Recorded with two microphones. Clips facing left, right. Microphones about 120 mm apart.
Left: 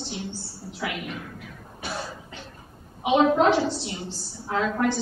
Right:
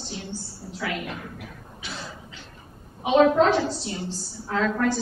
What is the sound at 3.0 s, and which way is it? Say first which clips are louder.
Speech: right 2 dB; 15° left (ahead or behind).